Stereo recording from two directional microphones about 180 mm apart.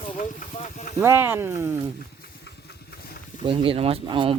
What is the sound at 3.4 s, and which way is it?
Speech, 30° right (ahead or behind).